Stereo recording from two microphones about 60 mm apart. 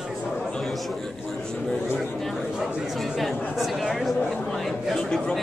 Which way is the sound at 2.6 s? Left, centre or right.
Centre.